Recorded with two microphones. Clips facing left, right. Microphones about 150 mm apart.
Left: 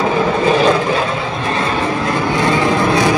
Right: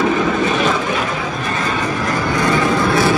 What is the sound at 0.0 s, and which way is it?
Vehicle, 30° left (ahead or behind).